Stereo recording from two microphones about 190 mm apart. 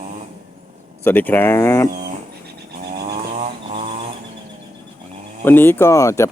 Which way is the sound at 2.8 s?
50° right (ahead or behind).